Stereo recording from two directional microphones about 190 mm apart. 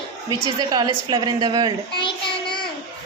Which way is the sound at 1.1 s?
20° right (ahead or behind).